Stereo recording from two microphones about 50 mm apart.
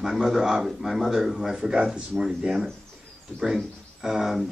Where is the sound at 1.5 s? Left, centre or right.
Centre.